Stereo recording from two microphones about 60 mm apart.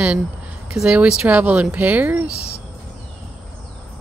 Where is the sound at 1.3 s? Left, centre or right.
Right.